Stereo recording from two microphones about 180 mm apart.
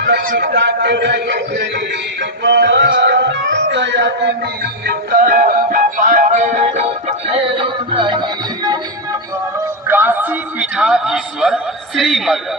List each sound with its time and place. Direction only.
0.2 s a man's voice: 55° right (ahead or behind); by 1.8 s 70° right (ahead or behind)
2.4 s music: 70° right (ahead or behind); by 8.8 s 25° right (ahead or behind)
9.8 s a man's voice: 10° right (ahead or behind)